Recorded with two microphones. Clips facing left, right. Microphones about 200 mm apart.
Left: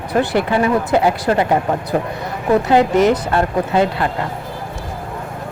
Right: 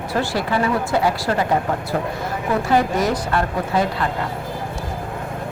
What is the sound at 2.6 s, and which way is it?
Speech, 20° left (ahead or behind).